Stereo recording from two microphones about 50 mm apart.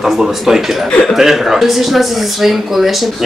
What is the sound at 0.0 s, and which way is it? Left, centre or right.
Speech, centre.